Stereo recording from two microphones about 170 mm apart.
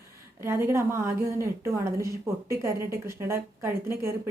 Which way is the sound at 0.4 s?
15° right (ahead or behind).